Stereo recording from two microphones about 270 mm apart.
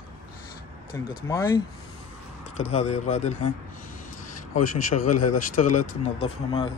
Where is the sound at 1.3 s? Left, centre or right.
Centre.